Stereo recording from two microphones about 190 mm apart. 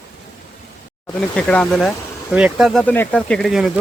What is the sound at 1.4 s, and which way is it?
Speech, 5° left (ahead or behind).